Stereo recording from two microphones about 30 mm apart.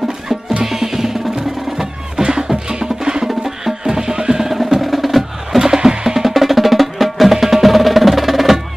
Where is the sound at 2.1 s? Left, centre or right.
Right.